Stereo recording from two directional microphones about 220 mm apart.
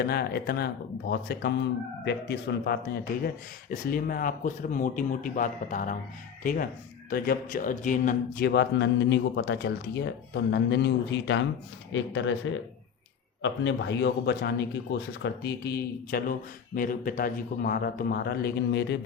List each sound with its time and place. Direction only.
0.0 s speech: 45° left (ahead or behind)
8.4 s speech: 50° left (ahead or behind)
13.4 s speech: 55° left (ahead or behind)